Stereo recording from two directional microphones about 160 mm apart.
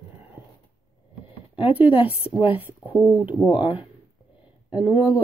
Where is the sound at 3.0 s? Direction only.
10° right (ahead or behind).